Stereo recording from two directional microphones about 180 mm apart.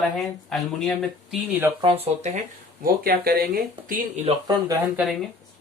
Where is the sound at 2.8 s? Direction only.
55° right (ahead or behind).